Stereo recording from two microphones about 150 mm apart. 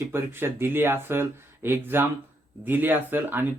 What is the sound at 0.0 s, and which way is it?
Speech, 15° right (ahead or behind).